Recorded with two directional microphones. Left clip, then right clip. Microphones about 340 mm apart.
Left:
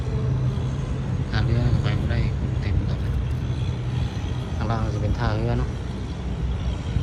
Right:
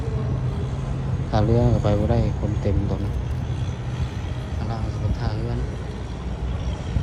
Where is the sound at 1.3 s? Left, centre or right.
Centre.